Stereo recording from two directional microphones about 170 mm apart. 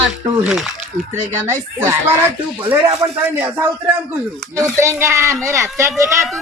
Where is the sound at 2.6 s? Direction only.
30° right (ahead or behind).